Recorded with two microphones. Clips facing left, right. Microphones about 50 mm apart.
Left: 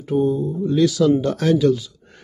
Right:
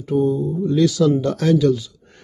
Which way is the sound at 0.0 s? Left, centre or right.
Centre.